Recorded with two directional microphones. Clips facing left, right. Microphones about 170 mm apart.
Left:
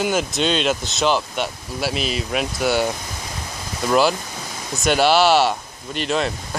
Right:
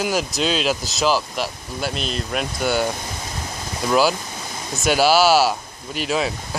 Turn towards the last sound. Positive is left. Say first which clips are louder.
# left 1 dB
turn(degrees=-5)  # may be behind; listen again after turning